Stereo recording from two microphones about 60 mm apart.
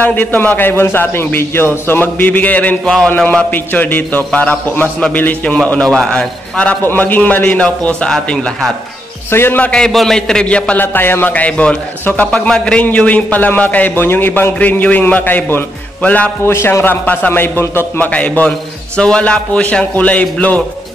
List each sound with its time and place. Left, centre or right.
0.0 s a man's voice: left
2.8 s a man's voice: centre
3.5 s a man's voice: left
6.8 s a man's voice: left
7.6 s a man's voice: centre
9.3 s speech: left
9.6 s a man's voice: centre
9.8 s a man's voice: centre
10.8 s a man's voice: left
16.4 s speech: left
16.8 s a man's voice: left
17.3 s a man's voice: left